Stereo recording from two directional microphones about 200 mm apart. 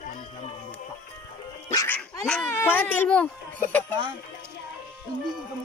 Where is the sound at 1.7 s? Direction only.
20° left (ahead or behind).